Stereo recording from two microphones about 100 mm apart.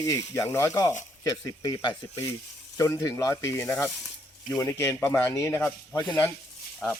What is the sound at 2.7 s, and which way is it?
Speech, 25° left (ahead or behind).